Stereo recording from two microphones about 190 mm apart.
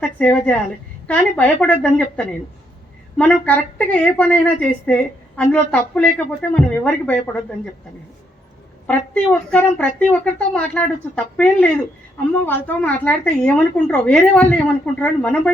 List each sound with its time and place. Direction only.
0.2 s a woman's voice: 5° left (ahead or behind)
8.9 s a woman's voice: 5° left (ahead or behind)